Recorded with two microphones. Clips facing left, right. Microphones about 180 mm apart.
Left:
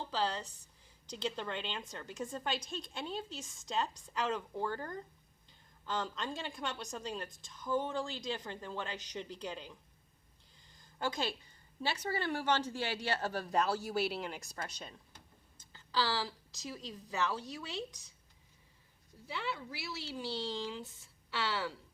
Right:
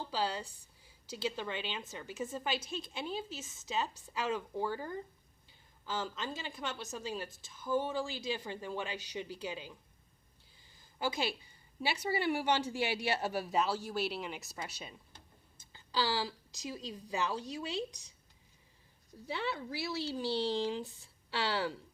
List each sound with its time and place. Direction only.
0.1 s a woman's voice: 10° right (ahead or behind)
10.7 s a sound: 5° right (ahead or behind)
11.8 s a woman's voice: 10° right (ahead or behind)
20.1 s speech: 35° right (ahead or behind)